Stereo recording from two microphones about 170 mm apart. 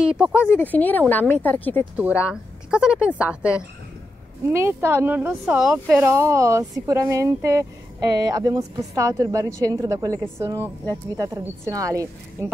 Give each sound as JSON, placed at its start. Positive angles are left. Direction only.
{"t": 0.0, "sound": "speech", "side_deg": -5}
{"t": 0.5, "sound": "speech", "side_deg": 10}
{"t": 2.0, "sound": "speech", "side_deg": -10}
{"t": 6.0, "sound": "a woman's voice", "side_deg": -15}